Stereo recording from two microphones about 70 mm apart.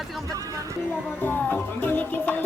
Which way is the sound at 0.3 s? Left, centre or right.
Right.